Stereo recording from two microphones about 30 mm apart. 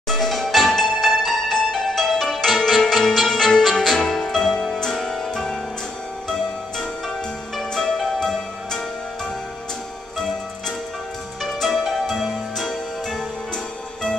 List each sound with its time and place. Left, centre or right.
0.1 s music: centre
2.7 s music: centre
7.7 s music: centre
11.4 s music: centre